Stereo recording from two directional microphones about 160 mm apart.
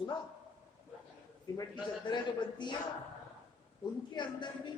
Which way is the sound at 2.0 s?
30° left (ahead or behind).